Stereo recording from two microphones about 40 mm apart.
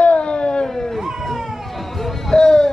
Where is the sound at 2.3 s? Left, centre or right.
Centre.